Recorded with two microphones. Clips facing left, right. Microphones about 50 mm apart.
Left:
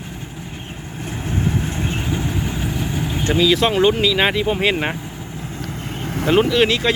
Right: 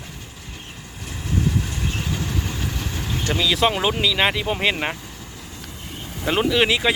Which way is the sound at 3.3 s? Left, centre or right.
Centre.